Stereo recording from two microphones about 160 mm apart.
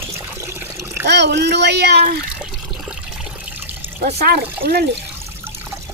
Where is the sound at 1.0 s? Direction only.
90° right.